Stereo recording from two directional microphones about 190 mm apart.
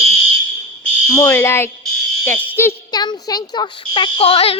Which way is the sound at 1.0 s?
15° left (ahead or behind).